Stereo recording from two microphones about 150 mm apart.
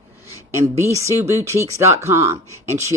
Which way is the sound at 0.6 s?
20° right (ahead or behind).